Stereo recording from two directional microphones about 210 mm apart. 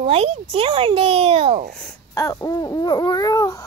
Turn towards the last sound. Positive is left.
turn(degrees=15)  # may be behind; listen again after turning